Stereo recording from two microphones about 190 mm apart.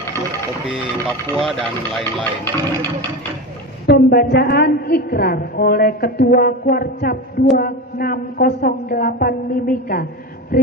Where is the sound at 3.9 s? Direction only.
55° left (ahead or behind).